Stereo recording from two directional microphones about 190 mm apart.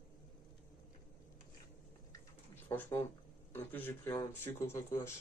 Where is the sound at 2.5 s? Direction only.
10° left (ahead or behind).